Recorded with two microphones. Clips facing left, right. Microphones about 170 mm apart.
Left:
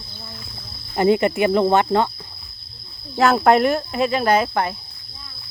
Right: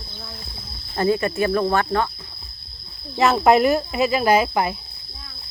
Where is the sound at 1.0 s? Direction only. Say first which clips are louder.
Left 3 dB; 20° left (ahead or behind).